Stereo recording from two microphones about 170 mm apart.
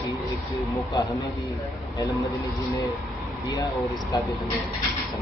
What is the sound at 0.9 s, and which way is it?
A man's voice, 20° left (ahead or behind).